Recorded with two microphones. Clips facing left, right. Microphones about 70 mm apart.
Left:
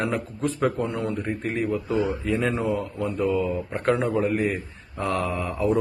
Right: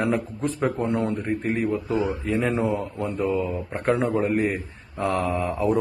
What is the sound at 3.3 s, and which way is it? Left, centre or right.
Speech, right.